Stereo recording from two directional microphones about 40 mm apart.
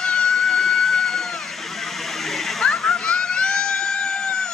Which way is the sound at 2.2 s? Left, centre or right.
Centre.